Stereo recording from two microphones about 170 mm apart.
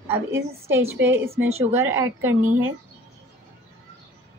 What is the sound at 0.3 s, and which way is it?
A woman's voice, 15° right (ahead or behind).